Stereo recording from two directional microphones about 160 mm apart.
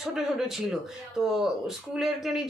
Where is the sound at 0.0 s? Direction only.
5° right (ahead or behind).